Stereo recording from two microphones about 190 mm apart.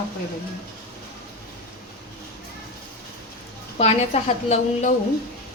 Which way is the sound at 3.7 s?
35° left (ahead or behind).